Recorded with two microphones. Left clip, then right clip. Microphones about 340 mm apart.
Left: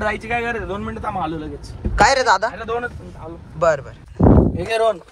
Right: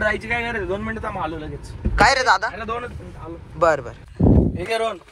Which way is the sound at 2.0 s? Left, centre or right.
Centre.